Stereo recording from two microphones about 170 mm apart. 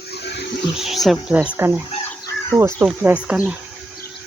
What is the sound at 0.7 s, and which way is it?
Speech, centre (ahead or behind).